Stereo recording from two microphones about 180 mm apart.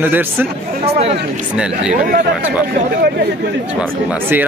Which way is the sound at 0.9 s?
35° right (ahead or behind).